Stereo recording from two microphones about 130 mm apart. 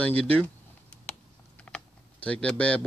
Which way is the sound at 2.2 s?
10° left (ahead or behind).